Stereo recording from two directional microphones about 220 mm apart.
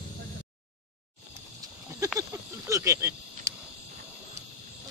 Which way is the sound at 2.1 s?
15° right (ahead or behind).